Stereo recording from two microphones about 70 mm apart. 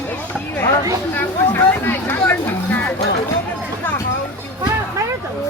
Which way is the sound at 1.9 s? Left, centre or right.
Left.